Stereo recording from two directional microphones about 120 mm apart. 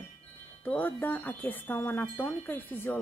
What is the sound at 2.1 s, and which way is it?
Chime, 20° left (ahead or behind).